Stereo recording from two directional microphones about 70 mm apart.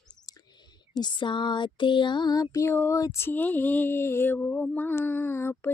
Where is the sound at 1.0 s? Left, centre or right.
Left.